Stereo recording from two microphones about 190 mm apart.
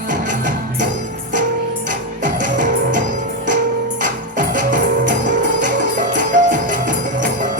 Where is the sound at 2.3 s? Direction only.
45° right (ahead or behind).